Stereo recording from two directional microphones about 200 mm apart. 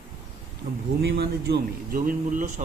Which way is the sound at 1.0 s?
55° right (ahead or behind).